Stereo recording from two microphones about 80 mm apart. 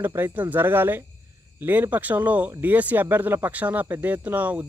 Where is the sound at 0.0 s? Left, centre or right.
Right.